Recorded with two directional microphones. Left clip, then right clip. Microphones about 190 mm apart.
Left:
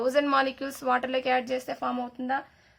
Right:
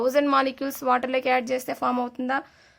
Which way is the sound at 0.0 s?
25° right (ahead or behind).